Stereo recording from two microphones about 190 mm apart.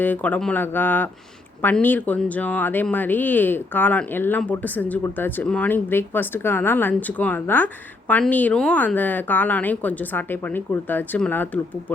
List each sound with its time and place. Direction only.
0.0 s speech: 10° left (ahead or behind)